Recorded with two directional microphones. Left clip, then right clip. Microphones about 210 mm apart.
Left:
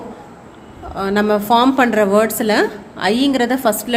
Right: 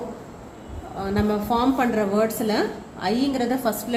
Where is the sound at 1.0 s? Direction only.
40° left (ahead or behind).